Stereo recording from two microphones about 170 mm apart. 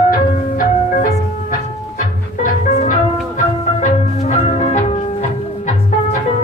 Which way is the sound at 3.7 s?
45° left (ahead or behind).